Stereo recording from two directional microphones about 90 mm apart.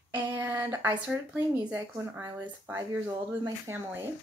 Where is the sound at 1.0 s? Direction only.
15° right (ahead or behind).